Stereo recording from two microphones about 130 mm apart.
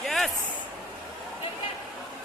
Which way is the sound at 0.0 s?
Centre (ahead or behind).